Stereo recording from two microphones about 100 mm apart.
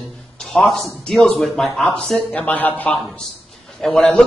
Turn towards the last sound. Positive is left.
turn(degrees=5)  # may be behind; listen again after turning